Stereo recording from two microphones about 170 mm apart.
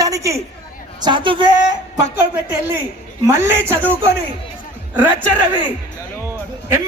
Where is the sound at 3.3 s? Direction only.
15° right (ahead or behind).